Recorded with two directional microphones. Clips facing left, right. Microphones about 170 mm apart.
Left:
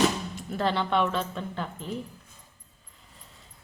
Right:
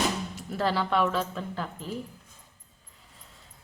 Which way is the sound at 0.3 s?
5° right (ahead or behind).